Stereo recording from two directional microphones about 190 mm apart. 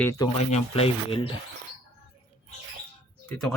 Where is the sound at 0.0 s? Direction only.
15° left (ahead or behind).